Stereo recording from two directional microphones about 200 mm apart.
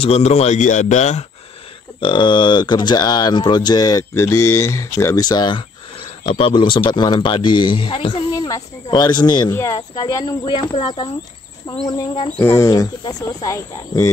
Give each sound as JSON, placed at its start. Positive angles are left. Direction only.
{"t": 0.0, "sound": "speech", "side_deg": 30}
{"t": 2.0, "sound": "speech", "side_deg": 25}
{"t": 12.4, "sound": "speech", "side_deg": 15}